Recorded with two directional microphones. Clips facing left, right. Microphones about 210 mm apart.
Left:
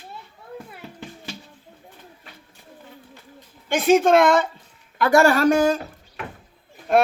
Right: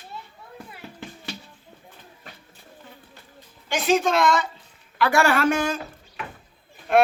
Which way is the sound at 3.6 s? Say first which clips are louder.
Left 5 dB; 55° left (ahead or behind).